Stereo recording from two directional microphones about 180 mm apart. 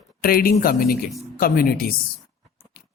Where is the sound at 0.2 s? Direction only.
55° left (ahead or behind).